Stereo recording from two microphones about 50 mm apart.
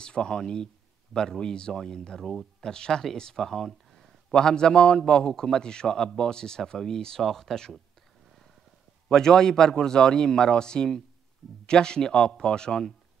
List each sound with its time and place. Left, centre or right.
0.0 s speech: centre
9.1 s speech: centre